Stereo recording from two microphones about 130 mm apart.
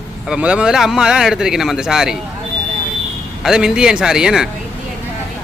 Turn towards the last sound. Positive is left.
turn(degrees=-5)  # may be behind; listen again after turning